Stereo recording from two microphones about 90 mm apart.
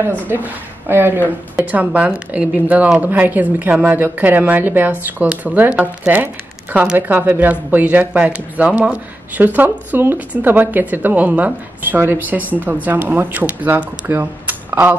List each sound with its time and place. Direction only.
0.8 s a woman's voice: 25° right (ahead or behind)